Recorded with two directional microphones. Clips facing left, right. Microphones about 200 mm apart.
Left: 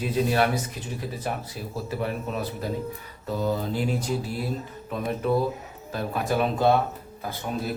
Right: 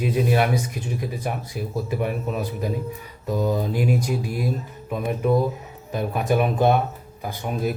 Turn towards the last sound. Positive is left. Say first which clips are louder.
# right 4 dB
turn(degrees=-15)  # may be behind; listen again after turning